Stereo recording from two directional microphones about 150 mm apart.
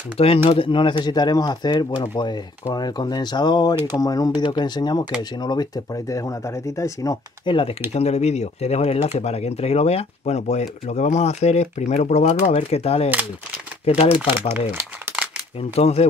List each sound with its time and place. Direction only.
0.2 s speech: 40° left (ahead or behind); by 7.5 s 25° left (ahead or behind)
7.9 s speech: 45° left (ahead or behind)
14.7 s speech: 15° right (ahead or behind)
15.7 s speech: 45° left (ahead or behind)